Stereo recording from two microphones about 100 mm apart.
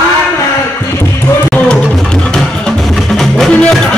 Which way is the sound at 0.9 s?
30° left (ahead or behind).